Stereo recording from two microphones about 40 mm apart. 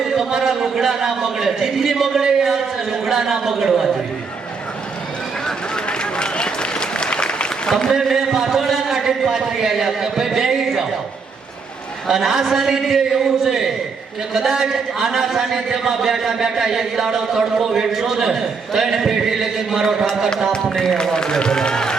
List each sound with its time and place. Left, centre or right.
0.0 s a man's voice: centre
5.5 s applause: centre
7.9 s a man's voice: centre
12.0 s a man's voice: centre
20.7 s a man's voice: centre